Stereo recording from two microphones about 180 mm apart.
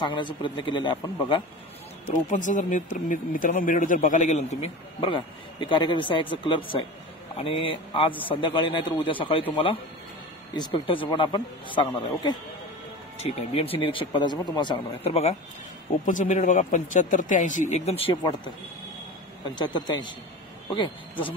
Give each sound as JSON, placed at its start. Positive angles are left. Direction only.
{"t": 0.0, "sound": "a man's voice", "side_deg": 25}
{"t": 2.2, "sound": "speech", "side_deg": 45}
{"t": 5.0, "sound": "a man's voice", "side_deg": 25}
{"t": 19.5, "sound": "a man's voice", "side_deg": 25}